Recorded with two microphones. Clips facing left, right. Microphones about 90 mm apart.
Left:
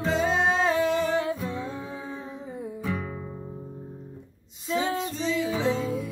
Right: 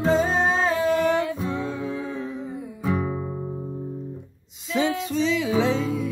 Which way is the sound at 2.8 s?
20° right (ahead or behind).